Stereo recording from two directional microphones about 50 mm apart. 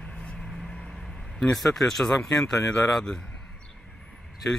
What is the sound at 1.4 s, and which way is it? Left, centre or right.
Speech, centre.